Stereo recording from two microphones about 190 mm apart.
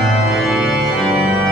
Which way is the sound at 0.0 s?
Centre (ahead or behind).